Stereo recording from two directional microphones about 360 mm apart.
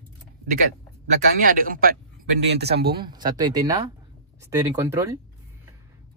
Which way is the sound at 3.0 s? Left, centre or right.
Centre.